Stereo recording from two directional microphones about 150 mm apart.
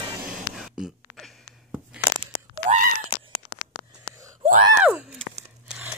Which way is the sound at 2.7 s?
65° right (ahead or behind).